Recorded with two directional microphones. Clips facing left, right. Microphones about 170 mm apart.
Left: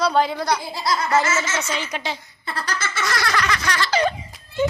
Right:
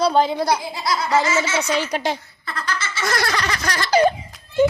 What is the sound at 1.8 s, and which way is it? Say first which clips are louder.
Giggle: right 5 dB; 45° right (ahead or behind).